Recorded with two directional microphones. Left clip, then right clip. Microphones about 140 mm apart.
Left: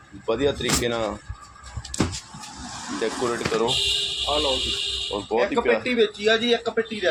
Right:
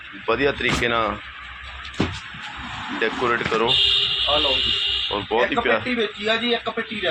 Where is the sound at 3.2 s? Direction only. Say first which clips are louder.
Right 3 dB; centre (ahead or behind).